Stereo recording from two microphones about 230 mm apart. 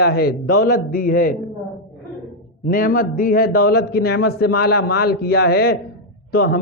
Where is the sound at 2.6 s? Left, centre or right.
Left.